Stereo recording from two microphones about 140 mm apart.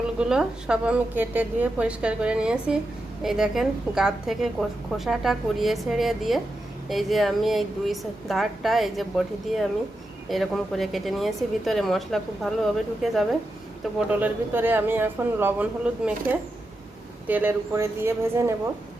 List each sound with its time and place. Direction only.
0.2 s a woman's voice: 5° right (ahead or behind)
14.1 s a woman's voice: 15° right (ahead or behind)